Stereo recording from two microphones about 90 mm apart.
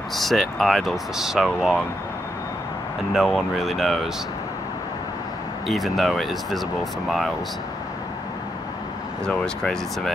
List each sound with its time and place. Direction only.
0.1 s speech: centre (ahead or behind)
3.1 s speech: 5° right (ahead or behind)
5.7 s speech: centre (ahead or behind)
9.2 s speech: 10° left (ahead or behind)